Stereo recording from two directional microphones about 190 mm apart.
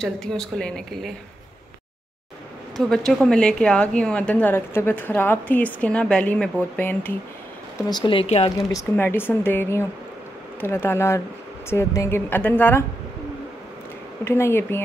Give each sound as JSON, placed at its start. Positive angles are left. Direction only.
{"t": 0.0, "sound": "speech", "side_deg": 5}
{"t": 2.8, "sound": "a woman's voice", "side_deg": 0}
{"t": 7.7, "sound": "speech", "side_deg": 25}
{"t": 8.5, "sound": "a woman's voice", "side_deg": 15}
{"t": 14.2, "sound": "a woman's voice", "side_deg": 15}